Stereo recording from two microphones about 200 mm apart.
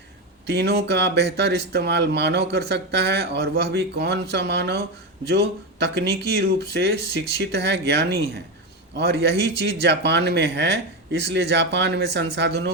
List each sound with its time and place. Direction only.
0.4 s speech: 55° right (ahead or behind)